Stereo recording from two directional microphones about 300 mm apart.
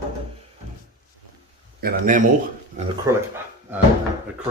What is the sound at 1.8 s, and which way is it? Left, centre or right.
Speech, right.